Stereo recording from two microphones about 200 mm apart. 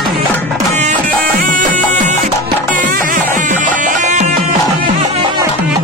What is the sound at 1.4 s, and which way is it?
Music, 40° right (ahead or behind).